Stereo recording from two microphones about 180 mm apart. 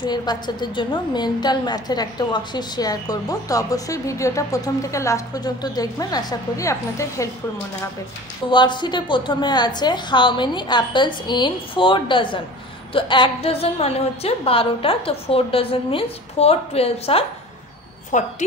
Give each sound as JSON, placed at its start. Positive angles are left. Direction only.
{"t": 0.0, "sound": "a woman's voice", "side_deg": 25}
{"t": 8.5, "sound": "a woman's voice", "side_deg": 25}
{"t": 18.1, "sound": "a woman's voice", "side_deg": 45}